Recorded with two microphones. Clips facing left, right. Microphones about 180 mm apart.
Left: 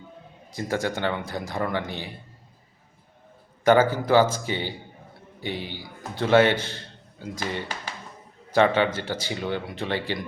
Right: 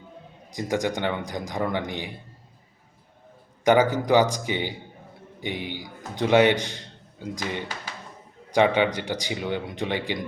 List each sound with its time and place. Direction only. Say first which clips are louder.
0.5 s speech: right 1 dB; 15° right (ahead or behind)
3.6 s a man's voice: even; 15° right (ahead or behind)